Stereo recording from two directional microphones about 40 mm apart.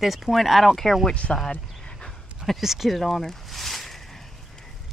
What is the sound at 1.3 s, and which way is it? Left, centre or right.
Speech, left.